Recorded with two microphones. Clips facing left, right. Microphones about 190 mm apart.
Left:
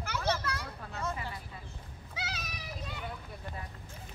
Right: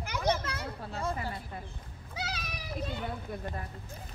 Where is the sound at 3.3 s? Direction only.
50° right (ahead or behind).